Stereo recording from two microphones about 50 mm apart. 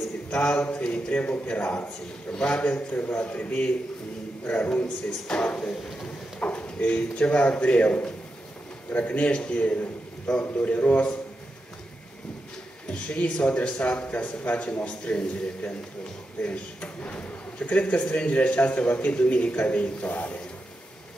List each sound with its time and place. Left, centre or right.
0.3 s a man's voice: left
2.3 s a man's voice: centre
2.6 s a man's voice: left
12.9 s a man's voice: left